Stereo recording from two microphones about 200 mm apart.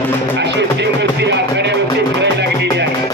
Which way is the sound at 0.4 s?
60° right (ahead or behind).